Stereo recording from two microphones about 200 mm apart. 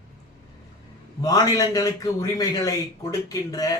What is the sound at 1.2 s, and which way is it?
A man's voice, 15° left (ahead or behind).